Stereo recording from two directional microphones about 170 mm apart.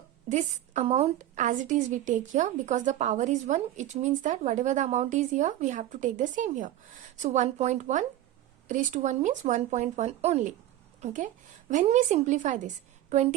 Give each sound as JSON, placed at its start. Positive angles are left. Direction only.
{"t": 0.3, "sound": "a woman's voice", "side_deg": -45}